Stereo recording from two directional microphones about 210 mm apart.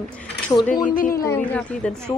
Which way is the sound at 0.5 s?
15° left (ahead or behind).